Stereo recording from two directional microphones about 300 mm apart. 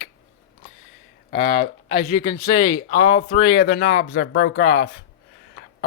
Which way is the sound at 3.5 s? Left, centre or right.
Left.